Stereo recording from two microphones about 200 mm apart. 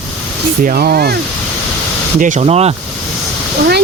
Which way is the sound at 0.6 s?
50° right (ahead or behind).